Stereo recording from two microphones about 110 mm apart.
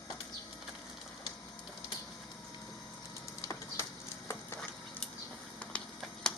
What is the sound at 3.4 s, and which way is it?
Printer, 30° left (ahead or behind).